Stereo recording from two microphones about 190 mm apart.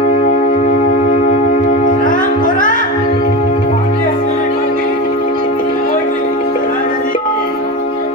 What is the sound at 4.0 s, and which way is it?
Music, 50° left (ahead or behind).